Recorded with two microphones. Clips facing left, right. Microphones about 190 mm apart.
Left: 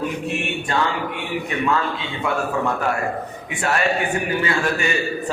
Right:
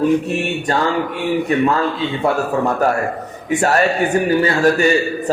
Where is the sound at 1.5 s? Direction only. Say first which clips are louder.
Right 4 dB; 40° right (ahead or behind).